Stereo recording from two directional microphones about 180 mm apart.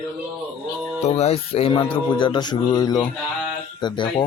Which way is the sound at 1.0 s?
35° left (ahead or behind).